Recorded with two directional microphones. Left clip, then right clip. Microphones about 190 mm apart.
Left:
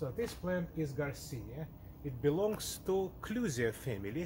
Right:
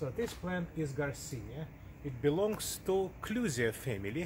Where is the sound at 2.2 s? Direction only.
10° right (ahead or behind).